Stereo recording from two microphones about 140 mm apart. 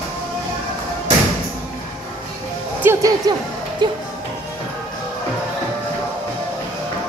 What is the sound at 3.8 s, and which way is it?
Speech, 35° right (ahead or behind).